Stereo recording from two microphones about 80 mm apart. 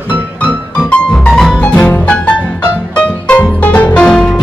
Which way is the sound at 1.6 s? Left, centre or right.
Centre.